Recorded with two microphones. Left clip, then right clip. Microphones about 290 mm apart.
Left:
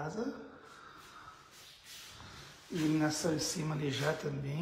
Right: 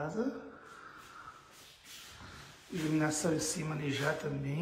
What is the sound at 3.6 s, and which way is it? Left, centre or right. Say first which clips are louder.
Speech: even; centre.